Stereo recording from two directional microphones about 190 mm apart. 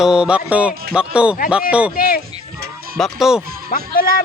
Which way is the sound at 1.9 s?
50° left (ahead or behind).